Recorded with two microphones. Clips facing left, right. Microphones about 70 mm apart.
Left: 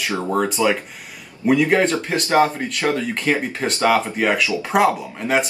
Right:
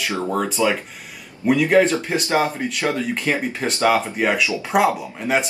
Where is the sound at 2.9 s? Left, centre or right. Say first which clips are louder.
Left 1 dB; centre.